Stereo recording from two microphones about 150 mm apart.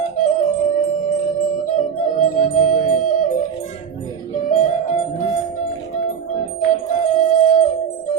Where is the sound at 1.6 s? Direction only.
55° left (ahead or behind).